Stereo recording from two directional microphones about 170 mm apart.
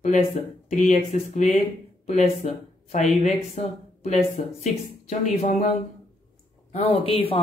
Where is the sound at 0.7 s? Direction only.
45° left (ahead or behind).